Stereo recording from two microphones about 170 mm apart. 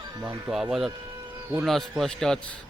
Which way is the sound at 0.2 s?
25° right (ahead or behind).